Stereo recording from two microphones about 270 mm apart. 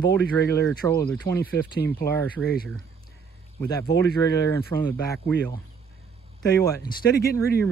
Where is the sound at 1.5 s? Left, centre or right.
Left.